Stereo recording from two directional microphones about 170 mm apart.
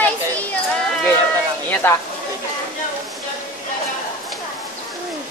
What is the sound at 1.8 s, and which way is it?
Speech, 10° left (ahead or behind).